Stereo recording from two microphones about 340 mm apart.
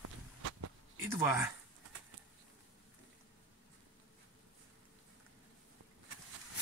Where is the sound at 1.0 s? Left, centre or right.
Centre.